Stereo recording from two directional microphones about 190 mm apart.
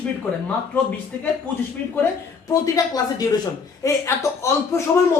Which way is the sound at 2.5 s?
20° left (ahead or behind).